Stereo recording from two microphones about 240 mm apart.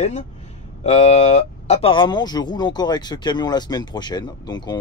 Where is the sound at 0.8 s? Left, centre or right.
Left.